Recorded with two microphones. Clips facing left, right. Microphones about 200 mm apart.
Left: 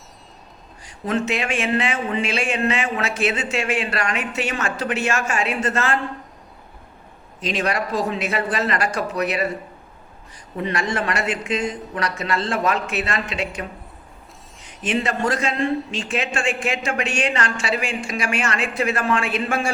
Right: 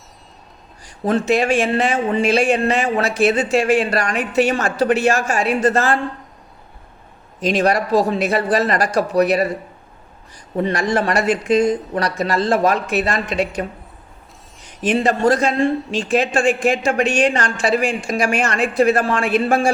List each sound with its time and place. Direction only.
1.0 s speech: 35° right (ahead or behind)
7.4 s speech: 40° right (ahead or behind)
10.6 s speech: 40° right (ahead or behind)
14.9 s speech: 35° right (ahead or behind)